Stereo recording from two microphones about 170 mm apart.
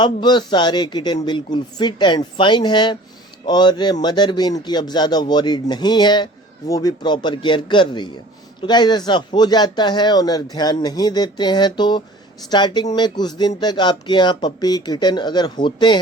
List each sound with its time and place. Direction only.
0.0 s speech: 25° left (ahead or behind)